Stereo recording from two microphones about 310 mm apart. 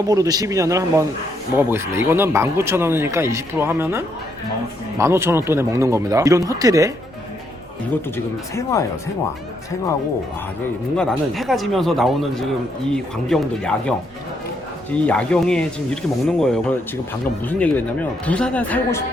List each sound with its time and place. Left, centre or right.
0.1 s speech: centre
8.1 s speech: centre
10.9 s speech: centre
15.0 s speech: centre